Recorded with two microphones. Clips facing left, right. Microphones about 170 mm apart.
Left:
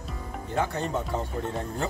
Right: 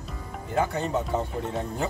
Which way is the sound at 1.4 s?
5° right (ahead or behind).